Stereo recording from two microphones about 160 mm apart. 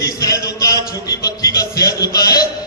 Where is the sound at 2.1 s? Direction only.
25° left (ahead or behind).